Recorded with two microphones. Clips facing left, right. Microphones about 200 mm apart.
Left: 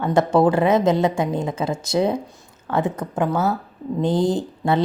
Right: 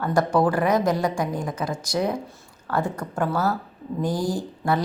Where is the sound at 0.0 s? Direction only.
25° left (ahead or behind).